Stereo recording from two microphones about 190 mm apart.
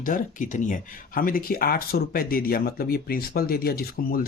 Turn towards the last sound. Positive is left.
turn(degrees=50)  # may be behind; listen again after turning